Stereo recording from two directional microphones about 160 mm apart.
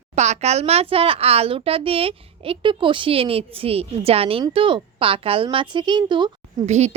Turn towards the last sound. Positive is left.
turn(degrees=-45)  # may be behind; listen again after turning